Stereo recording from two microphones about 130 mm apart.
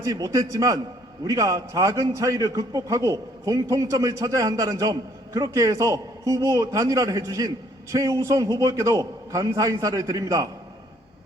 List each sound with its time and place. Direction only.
0.0 s a man's voice: 25° right (ahead or behind)